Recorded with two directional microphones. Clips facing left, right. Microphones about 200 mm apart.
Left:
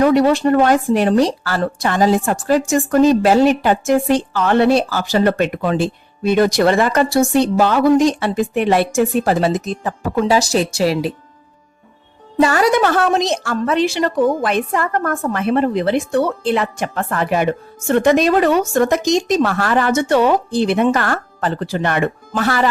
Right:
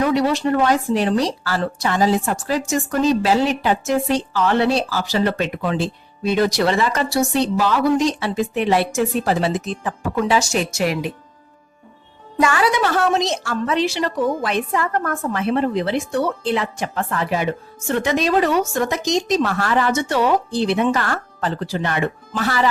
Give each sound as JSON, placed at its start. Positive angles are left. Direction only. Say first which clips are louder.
{"t": 0.0, "sound": "speech", "louder": "left 5 dB", "side_deg": 50}
{"t": 12.4, "sound": "speech", "louder": "left 4 dB", "side_deg": 40}